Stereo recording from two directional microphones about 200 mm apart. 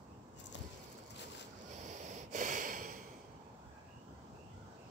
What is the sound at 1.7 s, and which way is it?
Snort, 40° right (ahead or behind).